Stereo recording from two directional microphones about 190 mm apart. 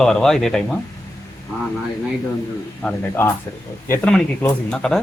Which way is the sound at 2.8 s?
10° left (ahead or behind).